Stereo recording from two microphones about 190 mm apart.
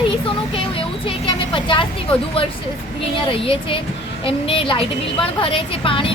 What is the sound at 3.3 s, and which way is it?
Speech, 30° left (ahead or behind).